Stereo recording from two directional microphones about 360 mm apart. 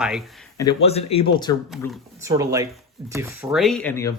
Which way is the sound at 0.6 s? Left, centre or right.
Centre.